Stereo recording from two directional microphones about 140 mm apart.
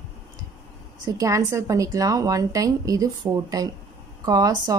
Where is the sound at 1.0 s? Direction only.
25° right (ahead or behind).